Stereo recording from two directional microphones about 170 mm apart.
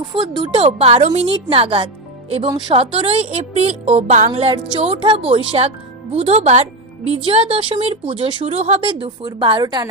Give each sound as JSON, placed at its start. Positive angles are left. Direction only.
{"t": 0.0, "sound": "speech", "side_deg": -25}
{"t": 4.3, "sound": "speech", "side_deg": -30}